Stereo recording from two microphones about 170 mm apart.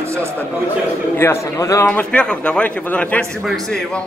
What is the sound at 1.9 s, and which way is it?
A man's voice, 5° left (ahead or behind).